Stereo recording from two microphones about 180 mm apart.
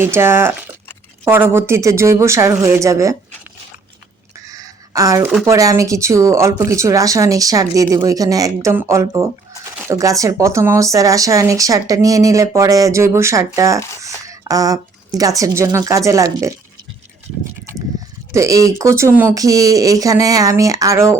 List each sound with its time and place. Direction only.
0.0 s speech: 15° right (ahead or behind)
4.4 s a sound: 20° right (ahead or behind)
5.5 s speech: 15° right (ahead or behind)
18.3 s speech: 20° right (ahead or behind)